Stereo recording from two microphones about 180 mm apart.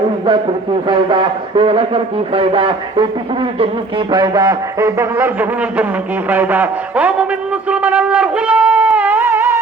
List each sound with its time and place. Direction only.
0.9 s speech: 25° right (ahead or behind); by 9.6 s 10° right (ahead or behind)